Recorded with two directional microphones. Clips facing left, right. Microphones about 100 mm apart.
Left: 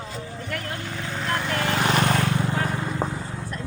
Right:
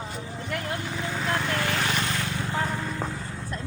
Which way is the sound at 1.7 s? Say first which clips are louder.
Left 5 dB; 40° left (ahead or behind).